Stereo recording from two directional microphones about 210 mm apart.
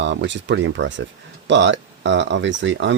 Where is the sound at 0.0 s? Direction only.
60° right (ahead or behind).